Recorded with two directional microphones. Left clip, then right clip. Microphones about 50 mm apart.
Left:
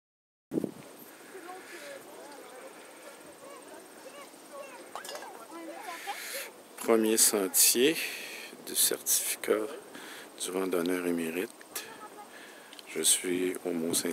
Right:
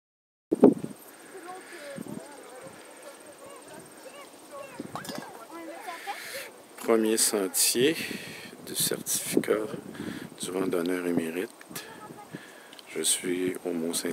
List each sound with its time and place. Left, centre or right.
1.5 s vehicle: centre
4.9 s a sound: right
5.9 s speech: centre
12.9 s speech: centre